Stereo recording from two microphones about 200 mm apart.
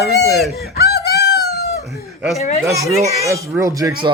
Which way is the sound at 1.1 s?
55° left (ahead or behind).